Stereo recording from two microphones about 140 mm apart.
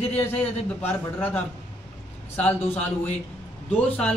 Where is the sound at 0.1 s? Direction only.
10° left (ahead or behind).